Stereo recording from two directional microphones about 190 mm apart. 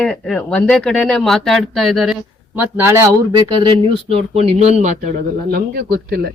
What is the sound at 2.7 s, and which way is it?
Speech, 15° right (ahead or behind).